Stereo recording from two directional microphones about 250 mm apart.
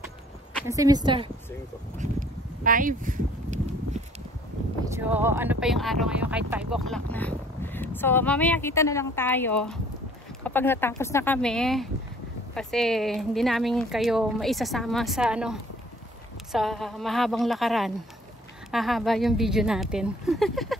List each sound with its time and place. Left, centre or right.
0.7 s a woman's voice: centre
2.0 s a sound: right
4.9 s speech: centre
16.5 s speech: centre